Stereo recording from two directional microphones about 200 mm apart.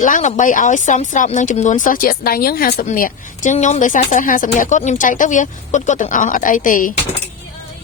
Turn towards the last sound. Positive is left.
turn(degrees=40)  # may be behind; listen again after turning